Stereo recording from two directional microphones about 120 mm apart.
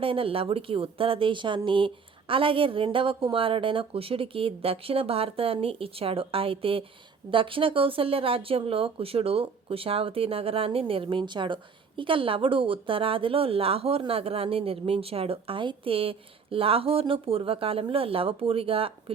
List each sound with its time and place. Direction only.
0.0 s speech: 50° right (ahead or behind)